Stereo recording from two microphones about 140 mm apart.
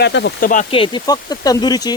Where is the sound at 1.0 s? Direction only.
25° left (ahead or behind).